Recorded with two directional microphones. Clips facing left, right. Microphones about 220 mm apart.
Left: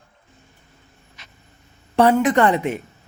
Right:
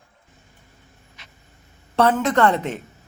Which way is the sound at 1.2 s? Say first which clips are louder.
Left 1 dB; 40° left (ahead or behind).